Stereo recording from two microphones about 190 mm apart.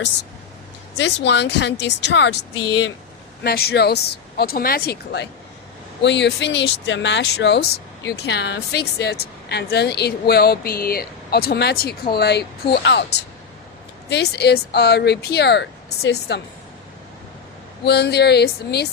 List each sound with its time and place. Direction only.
0.9 s speech: 65° left (ahead or behind)
3.4 s speech: 55° left (ahead or behind)
17.8 s speech: 60° left (ahead or behind)